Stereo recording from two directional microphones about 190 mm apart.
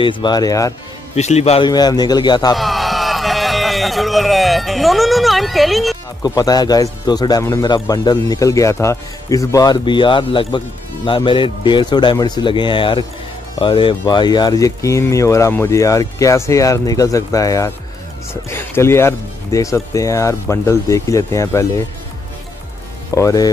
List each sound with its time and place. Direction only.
0.0 s speech: 25° left (ahead or behind)
1.1 s a man's voice: 35° left (ahead or behind)
1.7 s speech: 20° left (ahead or behind)
2.5 s a sound: centre (ahead or behind)
6.2 s speech: 20° left (ahead or behind)
23.1 s speech: 20° left (ahead or behind)